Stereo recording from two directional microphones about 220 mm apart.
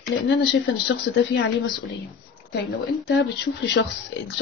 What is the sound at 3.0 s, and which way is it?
Speech, 50° left (ahead or behind).